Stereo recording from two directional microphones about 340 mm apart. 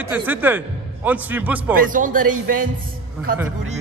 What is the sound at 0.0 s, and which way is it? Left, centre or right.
A man's voice, centre.